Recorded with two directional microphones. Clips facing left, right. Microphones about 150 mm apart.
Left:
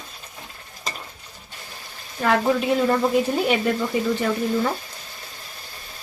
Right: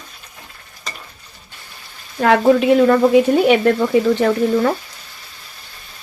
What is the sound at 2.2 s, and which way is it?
Speech, 80° right.